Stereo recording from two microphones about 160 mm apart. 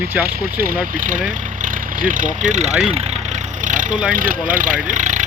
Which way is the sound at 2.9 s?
40° right (ahead or behind).